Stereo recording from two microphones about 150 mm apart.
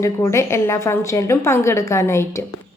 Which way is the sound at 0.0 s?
20° left (ahead or behind).